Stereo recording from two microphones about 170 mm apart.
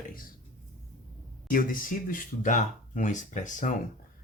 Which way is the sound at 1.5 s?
55° left (ahead or behind).